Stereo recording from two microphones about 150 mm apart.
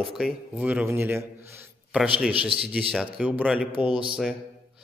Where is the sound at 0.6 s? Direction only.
10° right (ahead or behind).